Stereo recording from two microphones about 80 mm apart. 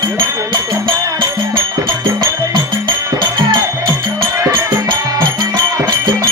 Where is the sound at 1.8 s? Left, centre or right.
Right.